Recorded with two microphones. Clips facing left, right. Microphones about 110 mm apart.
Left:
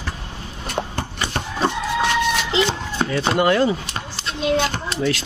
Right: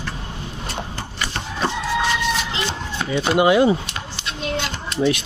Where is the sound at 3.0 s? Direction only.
40° left (ahead or behind).